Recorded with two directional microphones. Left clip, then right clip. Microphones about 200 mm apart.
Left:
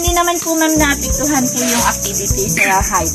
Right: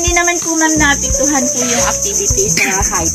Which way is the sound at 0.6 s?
35° left (ahead or behind).